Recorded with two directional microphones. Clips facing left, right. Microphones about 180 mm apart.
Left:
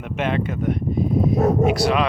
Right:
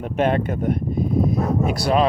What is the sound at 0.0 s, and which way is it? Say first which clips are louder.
Speech: right 3 dB; 45° right (ahead or behind).